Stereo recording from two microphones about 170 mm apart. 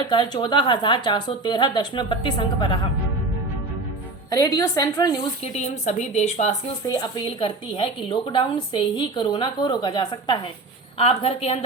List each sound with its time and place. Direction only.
0.1 s a woman's voice: 30° left (ahead or behind)
4.3 s a woman's voice: 20° left (ahead or behind)
5.4 s a woman's voice: 40° left (ahead or behind)
6.8 s a woman's voice: 20° left (ahead or behind)